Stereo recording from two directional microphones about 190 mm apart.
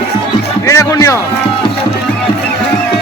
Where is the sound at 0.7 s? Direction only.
15° left (ahead or behind).